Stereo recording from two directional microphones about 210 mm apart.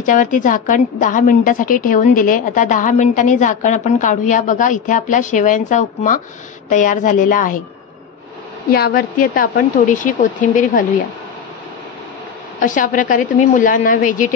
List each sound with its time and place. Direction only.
0.0 s a woman's voice: 40° left (ahead or behind)
8.7 s a woman's voice: 45° left (ahead or behind)
12.5 s a woman's voice: 40° left (ahead or behind)